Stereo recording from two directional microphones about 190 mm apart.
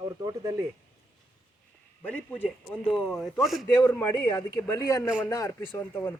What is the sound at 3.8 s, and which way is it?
Speech, 10° left (ahead or behind).